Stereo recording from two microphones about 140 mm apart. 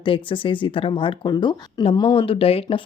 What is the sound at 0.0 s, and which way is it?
Speech, 40° left (ahead or behind).